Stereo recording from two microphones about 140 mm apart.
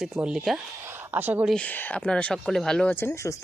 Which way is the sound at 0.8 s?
15° right (ahead or behind).